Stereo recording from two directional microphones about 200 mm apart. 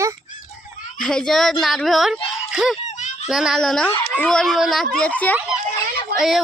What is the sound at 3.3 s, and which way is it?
Speech, centre (ahead or behind).